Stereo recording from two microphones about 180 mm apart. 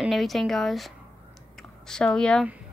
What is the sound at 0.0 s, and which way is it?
A woman's voice, centre (ahead or behind).